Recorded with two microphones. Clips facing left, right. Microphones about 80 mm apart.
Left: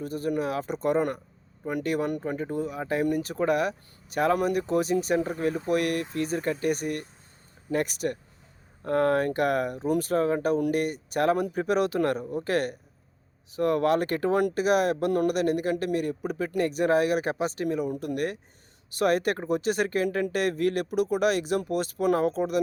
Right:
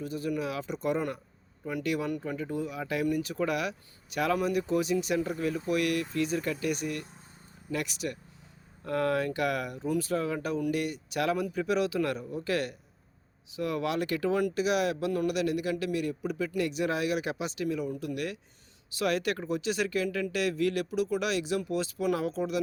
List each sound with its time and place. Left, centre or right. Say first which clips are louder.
0.0 s speech: left 4 dB; left